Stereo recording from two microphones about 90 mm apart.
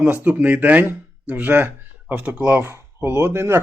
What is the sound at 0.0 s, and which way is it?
Speech, 20° right (ahead or behind).